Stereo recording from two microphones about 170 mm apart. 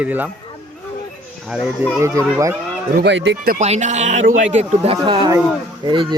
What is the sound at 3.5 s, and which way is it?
Speech, 45° right (ahead or behind).